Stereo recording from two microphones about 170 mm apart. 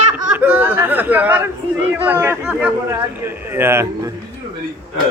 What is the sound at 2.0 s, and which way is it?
Speech, 15° right (ahead or behind).